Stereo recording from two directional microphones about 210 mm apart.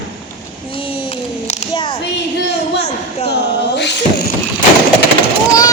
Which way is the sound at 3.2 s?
55° left (ahead or behind).